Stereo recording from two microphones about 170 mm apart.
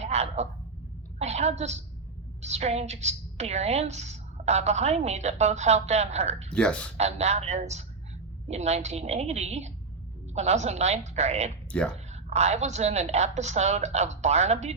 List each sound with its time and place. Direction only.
0.0 s a sound: 40° right (ahead or behind)
1.2 s a woman's voice: 40° right (ahead or behind)
6.5 s speech: 5° left (ahead or behind)
6.9 s a woman's voice: 40° right (ahead or behind)
11.7 s speech: 5° left (ahead or behind)
12.1 s a woman's voice: 40° right (ahead or behind)